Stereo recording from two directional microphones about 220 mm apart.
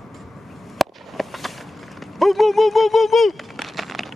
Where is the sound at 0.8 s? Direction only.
Centre (ahead or behind).